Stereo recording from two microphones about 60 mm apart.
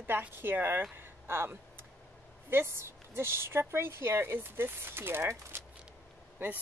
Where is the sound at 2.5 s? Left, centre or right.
Right.